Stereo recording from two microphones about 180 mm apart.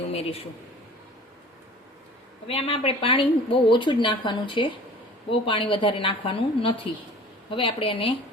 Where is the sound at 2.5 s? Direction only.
30° left (ahead or behind).